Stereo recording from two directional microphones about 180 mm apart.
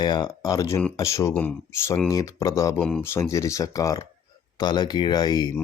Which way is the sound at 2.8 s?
5° left (ahead or behind).